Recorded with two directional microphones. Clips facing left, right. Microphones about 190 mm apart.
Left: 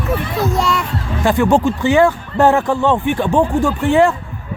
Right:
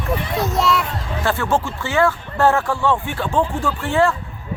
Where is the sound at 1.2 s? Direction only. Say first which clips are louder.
Left 7 dB; 15° left (ahead or behind).